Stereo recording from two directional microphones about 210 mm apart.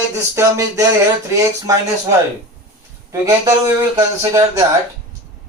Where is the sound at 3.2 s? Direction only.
15° right (ahead or behind).